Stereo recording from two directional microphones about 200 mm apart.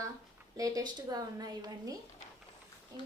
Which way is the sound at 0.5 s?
15° right (ahead or behind).